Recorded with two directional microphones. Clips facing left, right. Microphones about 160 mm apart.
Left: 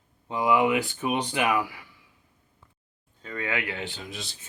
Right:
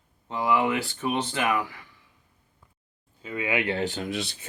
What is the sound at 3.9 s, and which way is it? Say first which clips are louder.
Speech: right 8 dB; 55° right (ahead or behind).